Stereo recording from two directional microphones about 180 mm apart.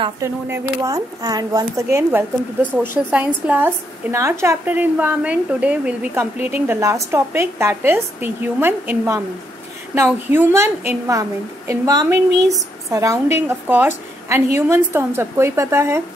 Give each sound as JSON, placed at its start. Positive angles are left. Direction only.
{"t": 0.2, "sound": "a woman's voice", "side_deg": -15}